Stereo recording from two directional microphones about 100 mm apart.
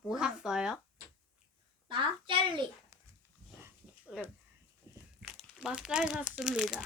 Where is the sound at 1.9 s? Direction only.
55° right (ahead or behind).